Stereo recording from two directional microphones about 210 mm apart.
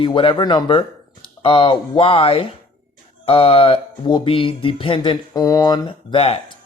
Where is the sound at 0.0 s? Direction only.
25° left (ahead or behind).